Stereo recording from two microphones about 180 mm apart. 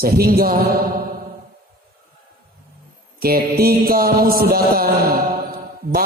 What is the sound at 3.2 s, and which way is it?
A man's voice, 55° right (ahead or behind).